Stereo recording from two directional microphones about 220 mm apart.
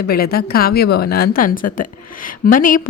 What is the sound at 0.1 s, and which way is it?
A woman's voice, 45° left (ahead or behind).